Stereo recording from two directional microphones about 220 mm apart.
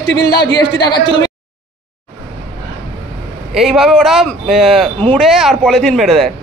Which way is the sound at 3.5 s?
Centre (ahead or behind).